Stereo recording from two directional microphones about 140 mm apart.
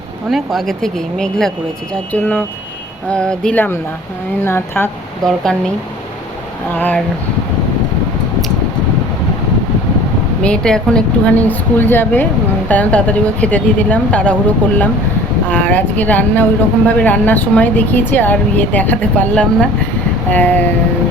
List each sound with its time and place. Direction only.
0.3 s a woman's voice: centre (ahead or behind); by 4.9 s 15° left (ahead or behind)
5.2 s speech: 5° left (ahead or behind)
6.7 s a woman's voice: 10° left (ahead or behind)
10.4 s a woman's voice: 5° left (ahead or behind)
15.4 s a woman's voice: 10° left (ahead or behind)